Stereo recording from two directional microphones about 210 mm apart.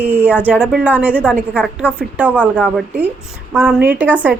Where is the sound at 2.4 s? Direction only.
5° left (ahead or behind).